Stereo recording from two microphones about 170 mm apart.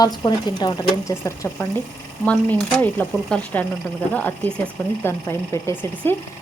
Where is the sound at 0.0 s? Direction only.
25° left (ahead or behind).